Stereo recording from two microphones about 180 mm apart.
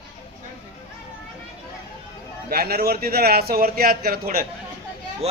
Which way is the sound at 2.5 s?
60° right (ahead or behind).